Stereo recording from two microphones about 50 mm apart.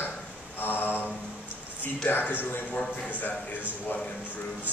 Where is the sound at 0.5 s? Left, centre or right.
Left.